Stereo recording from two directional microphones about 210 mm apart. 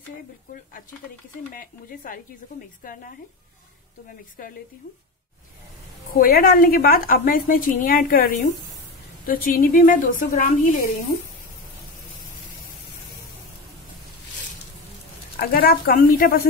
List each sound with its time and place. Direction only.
1.5 s a woman's voice: 40° left (ahead or behind)
6.1 s a woman's voice: 45° left (ahead or behind)
15.3 s a woman's voice: 45° left (ahead or behind)